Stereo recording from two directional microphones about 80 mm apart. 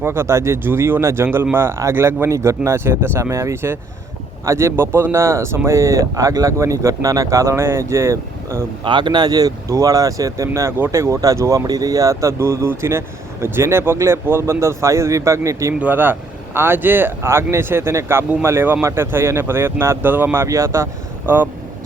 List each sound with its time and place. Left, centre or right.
0.0 s speech: right
8.8 s speech: right
15.8 s speech: right